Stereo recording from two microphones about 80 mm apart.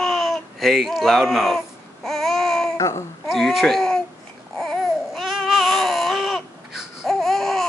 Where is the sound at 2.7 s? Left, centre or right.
Left.